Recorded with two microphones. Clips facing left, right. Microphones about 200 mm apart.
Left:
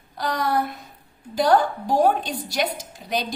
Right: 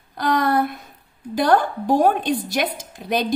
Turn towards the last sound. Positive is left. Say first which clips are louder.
# right 4 dB
turn(degrees=-55)  # may be behind; listen again after turning